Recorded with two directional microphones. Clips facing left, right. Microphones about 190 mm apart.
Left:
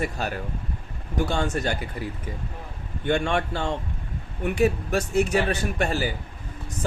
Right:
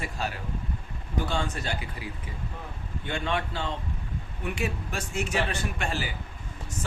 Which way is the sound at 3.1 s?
50° left (ahead or behind).